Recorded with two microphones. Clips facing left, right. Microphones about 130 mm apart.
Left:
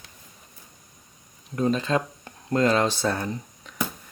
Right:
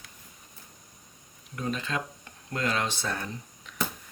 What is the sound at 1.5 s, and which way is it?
Speech, 35° left (ahead or behind).